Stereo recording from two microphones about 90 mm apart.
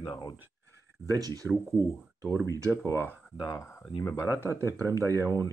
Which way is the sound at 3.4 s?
45° left (ahead or behind).